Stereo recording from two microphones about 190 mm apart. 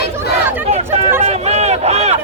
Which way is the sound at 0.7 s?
35° right (ahead or behind).